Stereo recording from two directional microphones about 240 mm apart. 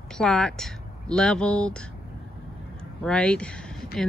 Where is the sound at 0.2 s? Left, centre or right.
Centre.